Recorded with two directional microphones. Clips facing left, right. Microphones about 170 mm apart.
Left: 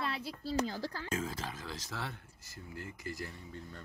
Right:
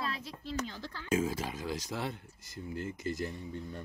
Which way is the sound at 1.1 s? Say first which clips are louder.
Right 11 dB; 10° right (ahead or behind).